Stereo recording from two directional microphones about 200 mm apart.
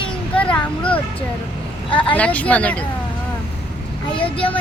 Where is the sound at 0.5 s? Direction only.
5° left (ahead or behind).